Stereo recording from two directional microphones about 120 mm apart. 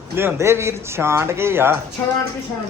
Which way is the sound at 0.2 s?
20° right (ahead or behind).